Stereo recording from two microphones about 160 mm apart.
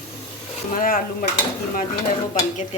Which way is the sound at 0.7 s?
60° left (ahead or behind).